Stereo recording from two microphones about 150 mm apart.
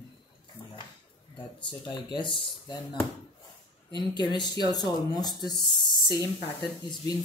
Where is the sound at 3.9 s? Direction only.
30° left (ahead or behind).